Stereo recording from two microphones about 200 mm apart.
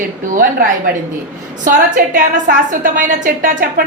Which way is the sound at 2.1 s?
40° right (ahead or behind).